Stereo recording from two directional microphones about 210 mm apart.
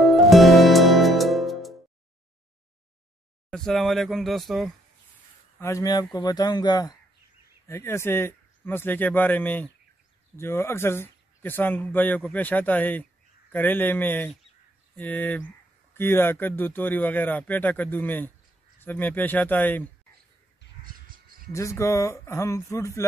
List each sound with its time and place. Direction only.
0.0 s music: centre (ahead or behind)
3.4 s speech: 5° left (ahead or behind)
5.6 s a man's voice: 15° left (ahead or behind)
20.8 s crow: 40° right (ahead or behind)
21.5 s speech: 15° left (ahead or behind)